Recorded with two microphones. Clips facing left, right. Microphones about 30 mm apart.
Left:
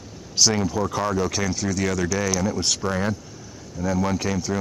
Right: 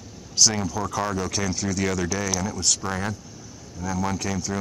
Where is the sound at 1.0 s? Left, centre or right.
Centre.